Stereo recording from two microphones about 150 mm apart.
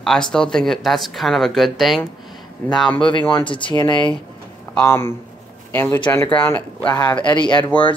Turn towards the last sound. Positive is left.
turn(degrees=30)  # may be behind; listen again after turning